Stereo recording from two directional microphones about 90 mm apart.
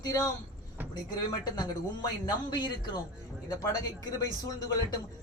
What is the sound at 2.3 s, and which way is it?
Speech, 50° left (ahead or behind).